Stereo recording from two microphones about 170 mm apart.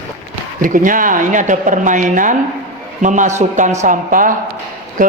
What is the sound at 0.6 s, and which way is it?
Speech, 50° right (ahead or behind).